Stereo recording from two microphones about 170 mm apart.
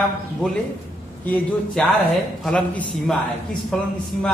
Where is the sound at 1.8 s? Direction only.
5° left (ahead or behind).